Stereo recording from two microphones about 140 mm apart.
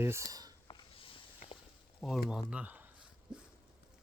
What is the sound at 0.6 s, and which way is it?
Walk, 40° left (ahead or behind).